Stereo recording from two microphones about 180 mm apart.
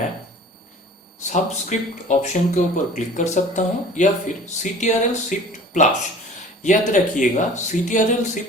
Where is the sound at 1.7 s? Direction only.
40° left (ahead or behind).